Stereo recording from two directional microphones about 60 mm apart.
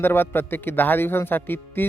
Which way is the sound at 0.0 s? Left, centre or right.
Left.